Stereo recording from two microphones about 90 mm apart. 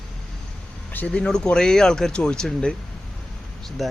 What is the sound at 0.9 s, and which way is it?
Speech, 15° left (ahead or behind).